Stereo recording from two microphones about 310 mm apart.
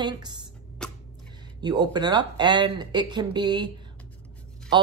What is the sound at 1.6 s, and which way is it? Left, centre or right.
Speech, centre.